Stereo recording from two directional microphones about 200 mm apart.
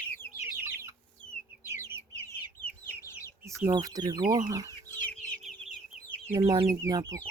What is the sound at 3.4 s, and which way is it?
Speech, 15° right (ahead or behind).